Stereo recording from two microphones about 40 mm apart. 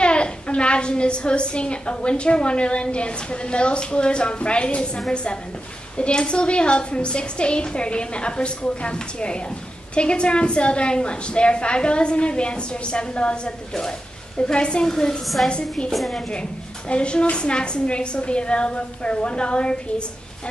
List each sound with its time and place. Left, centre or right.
0.0 s a woman's voice: left
15.9 s a woman's voice: centre
16.2 s a woman's voice: left